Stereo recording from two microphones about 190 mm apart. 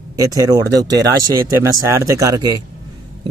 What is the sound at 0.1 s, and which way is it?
Speech, 20° right (ahead or behind).